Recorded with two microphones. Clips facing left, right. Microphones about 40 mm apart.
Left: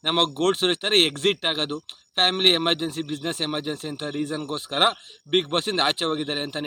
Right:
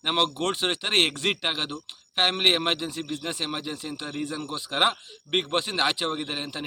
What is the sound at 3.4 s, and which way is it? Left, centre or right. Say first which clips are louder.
Speech: left 4 dB; left.